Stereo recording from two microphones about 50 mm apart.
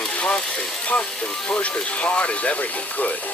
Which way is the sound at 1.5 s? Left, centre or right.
Left.